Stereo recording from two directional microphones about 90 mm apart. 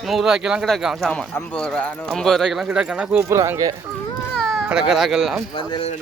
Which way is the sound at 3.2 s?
30° right (ahead or behind).